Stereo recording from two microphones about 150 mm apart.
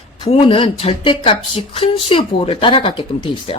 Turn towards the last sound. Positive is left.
turn(degrees=35)  # may be behind; listen again after turning